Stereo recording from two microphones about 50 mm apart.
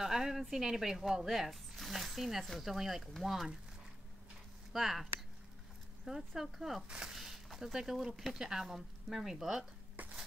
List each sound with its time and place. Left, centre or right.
0.0 s a woman's voice: centre
4.7 s a woman's voice: centre
6.0 s speech: centre
10.0 s a sound: right